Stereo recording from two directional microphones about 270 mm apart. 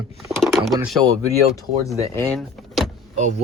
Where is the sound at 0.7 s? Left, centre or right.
Centre.